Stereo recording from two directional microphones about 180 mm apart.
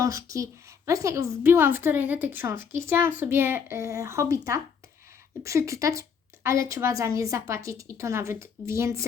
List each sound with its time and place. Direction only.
0.0 s a woman's voice: 15° right (ahead or behind)